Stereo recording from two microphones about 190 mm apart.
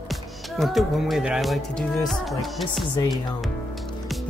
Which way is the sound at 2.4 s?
Centre (ahead or behind).